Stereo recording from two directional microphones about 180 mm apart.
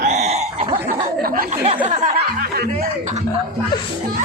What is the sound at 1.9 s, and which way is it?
Speech, 40° right (ahead or behind).